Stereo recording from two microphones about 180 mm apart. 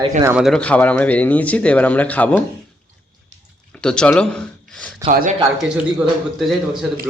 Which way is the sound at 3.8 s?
5° left (ahead or behind).